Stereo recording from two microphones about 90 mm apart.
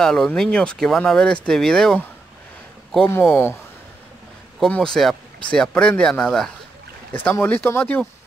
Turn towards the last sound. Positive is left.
turn(degrees=25)  # may be behind; listen again after turning